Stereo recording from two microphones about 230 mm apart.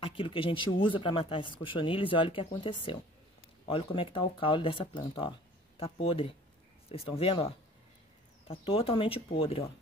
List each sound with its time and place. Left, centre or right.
0.0 s speech: left